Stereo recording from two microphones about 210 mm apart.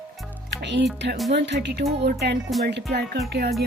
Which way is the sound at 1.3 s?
55° right (ahead or behind).